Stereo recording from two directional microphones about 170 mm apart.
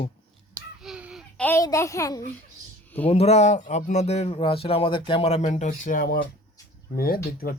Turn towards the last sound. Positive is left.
turn(degrees=60)  # may be behind; listen again after turning